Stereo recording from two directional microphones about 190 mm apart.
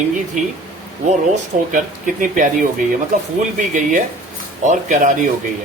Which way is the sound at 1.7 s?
45° right (ahead or behind).